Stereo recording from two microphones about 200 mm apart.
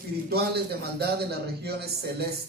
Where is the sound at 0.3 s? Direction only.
50° right (ahead or behind).